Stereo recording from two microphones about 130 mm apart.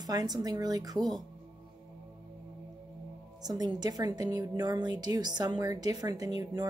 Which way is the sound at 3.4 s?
30° right (ahead or behind).